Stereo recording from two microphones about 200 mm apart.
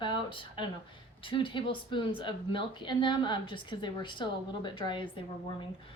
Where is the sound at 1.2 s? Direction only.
25° left (ahead or behind).